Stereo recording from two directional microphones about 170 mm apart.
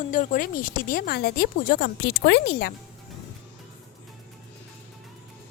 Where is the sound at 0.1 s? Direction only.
50° left (ahead or behind); by 2.7 s 70° left (ahead or behind).